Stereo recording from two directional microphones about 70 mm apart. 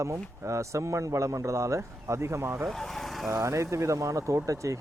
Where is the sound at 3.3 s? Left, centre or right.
Right.